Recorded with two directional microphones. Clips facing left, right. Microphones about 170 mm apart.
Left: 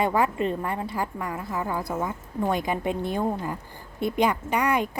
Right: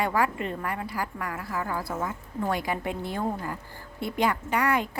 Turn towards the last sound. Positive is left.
turn(degrees=20)  # may be behind; listen again after turning